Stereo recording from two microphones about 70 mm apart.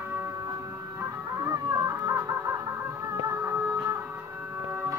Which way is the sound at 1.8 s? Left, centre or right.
Right.